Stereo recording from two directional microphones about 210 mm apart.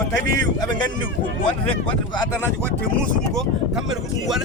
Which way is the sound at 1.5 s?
20° left (ahead or behind).